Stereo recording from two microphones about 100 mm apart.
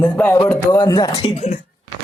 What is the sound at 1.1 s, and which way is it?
Speech, 65° left (ahead or behind).